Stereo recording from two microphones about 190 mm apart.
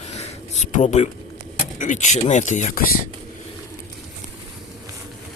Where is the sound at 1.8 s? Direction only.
40° left (ahead or behind).